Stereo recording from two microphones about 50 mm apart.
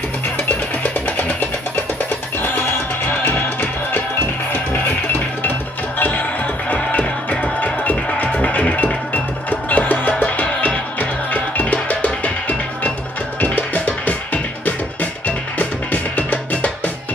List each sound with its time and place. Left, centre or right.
0.9 s music: left
3.2 s music: left
5.9 s music: left